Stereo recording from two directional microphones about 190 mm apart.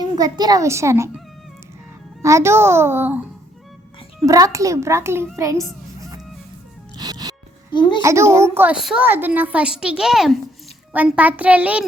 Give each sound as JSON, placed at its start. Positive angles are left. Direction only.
{"t": 0.0, "sound": "a woman's voice", "side_deg": -20}
{"t": 2.2, "sound": "a woman's voice", "side_deg": -15}
{"t": 4.3, "sound": "a woman's voice", "side_deg": -15}
{"t": 5.4, "sound": "fowl", "side_deg": -15}
{"t": 6.9, "sound": "music", "side_deg": -20}
{"t": 7.7, "sound": "a child's voice", "side_deg": 25}
{"t": 8.0, "sound": "a woman's voice", "side_deg": -15}